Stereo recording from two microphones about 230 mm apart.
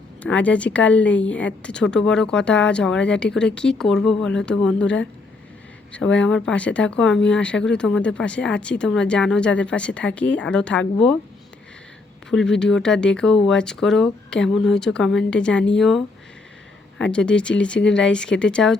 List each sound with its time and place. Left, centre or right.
0.2 s speech: centre
12.3 s speech: centre